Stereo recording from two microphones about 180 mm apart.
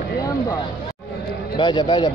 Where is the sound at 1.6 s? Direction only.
25° left (ahead or behind).